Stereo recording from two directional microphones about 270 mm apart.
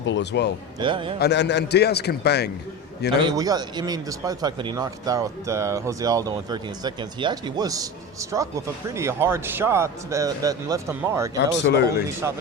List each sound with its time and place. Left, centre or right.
0.0 s a man's voice: left
0.8 s a man's voice: centre
1.2 s a man's voice: left
3.1 s speech: centre
11.3 s a man's voice: left
12.2 s speech: centre